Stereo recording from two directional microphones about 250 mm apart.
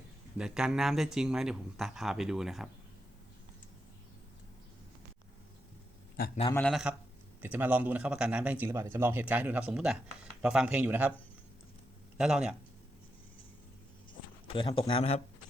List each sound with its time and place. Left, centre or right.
0.3 s speech: centre
6.1 s a man's voice: left
6.5 s a man's voice: centre
12.1 s speech: centre
14.4 s speech: left